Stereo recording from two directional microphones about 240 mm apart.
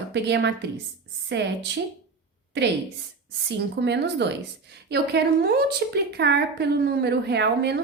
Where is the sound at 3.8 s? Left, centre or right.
Right.